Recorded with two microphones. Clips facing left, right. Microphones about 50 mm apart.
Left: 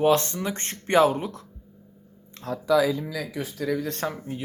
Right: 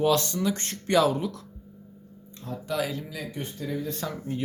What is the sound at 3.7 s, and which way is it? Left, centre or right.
Speech, left.